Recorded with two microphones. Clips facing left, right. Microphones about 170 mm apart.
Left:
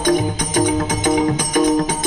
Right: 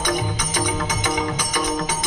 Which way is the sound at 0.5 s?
50° left (ahead or behind).